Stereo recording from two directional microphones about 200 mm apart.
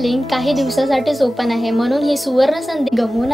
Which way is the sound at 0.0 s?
Centre (ahead or behind).